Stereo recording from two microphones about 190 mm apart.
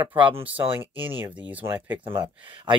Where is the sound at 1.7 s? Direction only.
10° right (ahead or behind).